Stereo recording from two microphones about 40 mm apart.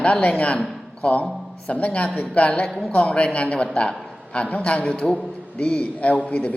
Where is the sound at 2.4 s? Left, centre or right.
Left.